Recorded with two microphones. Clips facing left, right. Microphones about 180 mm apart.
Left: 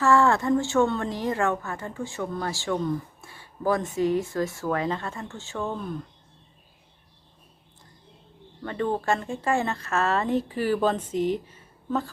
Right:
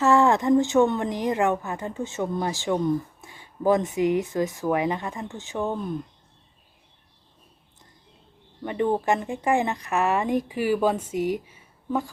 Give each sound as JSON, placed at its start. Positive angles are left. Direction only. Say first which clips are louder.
{"t": 0.0, "sound": "a woman's voice", "louder": "right 1 dB", "side_deg": -20}
{"t": 8.6, "sound": "a woman's voice", "louder": "right 3 dB", "side_deg": -15}